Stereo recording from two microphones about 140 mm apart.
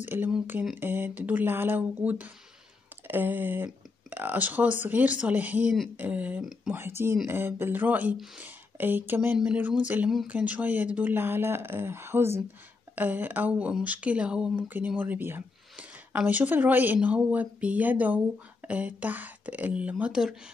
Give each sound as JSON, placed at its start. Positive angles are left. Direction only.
{"t": 0.0, "sound": "speech", "side_deg": -15}
{"t": 6.7, "sound": "speech", "side_deg": -15}